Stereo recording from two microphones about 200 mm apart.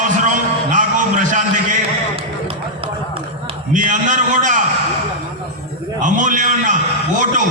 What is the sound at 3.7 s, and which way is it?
Speech, 40° right (ahead or behind).